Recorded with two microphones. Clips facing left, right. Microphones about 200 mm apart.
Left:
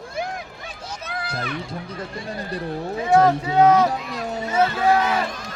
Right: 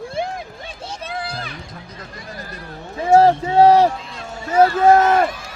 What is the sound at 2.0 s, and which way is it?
Speech, 30° left (ahead or behind).